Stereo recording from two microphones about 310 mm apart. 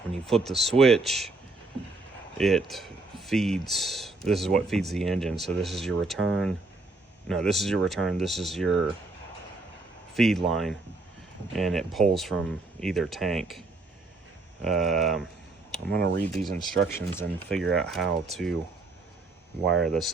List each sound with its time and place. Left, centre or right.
0.1 s speech: centre
2.4 s speech: centre
10.2 s speech: centre
14.6 s speech: centre
15.9 s speech: right
16.2 s speech: centre
19.6 s speech: centre